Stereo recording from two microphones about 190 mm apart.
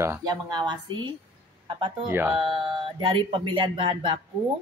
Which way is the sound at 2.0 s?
10° right (ahead or behind).